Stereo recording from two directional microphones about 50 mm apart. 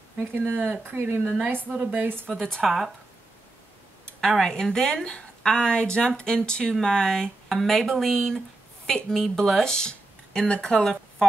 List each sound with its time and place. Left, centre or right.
0.6 s a woman's voice: right
0.9 s speech: right
1.7 s a woman's voice: right
2.2 s a woman's voice: centre
4.2 s a woman's voice: centre